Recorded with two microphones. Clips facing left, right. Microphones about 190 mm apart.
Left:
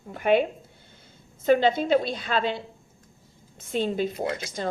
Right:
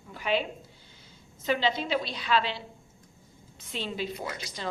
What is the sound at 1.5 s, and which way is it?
A woman's voice, 50° left (ahead or behind).